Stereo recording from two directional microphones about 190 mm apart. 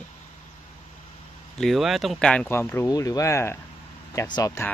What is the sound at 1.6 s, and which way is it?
Speech, centre (ahead or behind).